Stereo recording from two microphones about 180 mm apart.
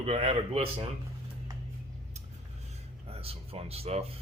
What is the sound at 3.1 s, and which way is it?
Speech, 35° right (ahead or behind).